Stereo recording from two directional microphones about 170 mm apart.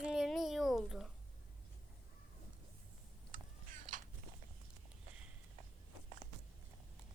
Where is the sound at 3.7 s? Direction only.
50° right (ahead or behind).